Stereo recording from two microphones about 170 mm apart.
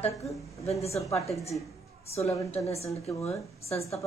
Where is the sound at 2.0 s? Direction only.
35° left (ahead or behind).